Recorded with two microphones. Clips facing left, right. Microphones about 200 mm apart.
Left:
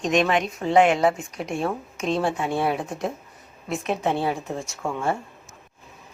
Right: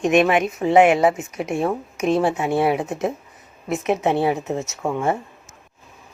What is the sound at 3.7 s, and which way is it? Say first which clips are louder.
A woman's voice: right 5 dB; 20° right (ahead or behind).